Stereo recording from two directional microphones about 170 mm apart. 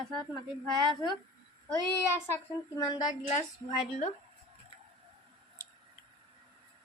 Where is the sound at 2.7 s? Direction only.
25° left (ahead or behind).